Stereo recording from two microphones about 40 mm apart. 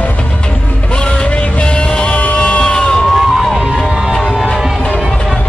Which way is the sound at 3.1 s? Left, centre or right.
Centre.